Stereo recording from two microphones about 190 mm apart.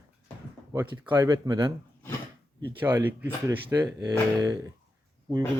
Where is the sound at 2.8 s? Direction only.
10° right (ahead or behind).